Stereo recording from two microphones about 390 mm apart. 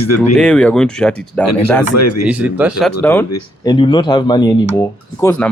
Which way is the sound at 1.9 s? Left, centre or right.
Left.